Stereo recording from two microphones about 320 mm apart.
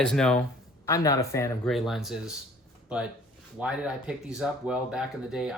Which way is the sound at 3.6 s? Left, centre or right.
Centre.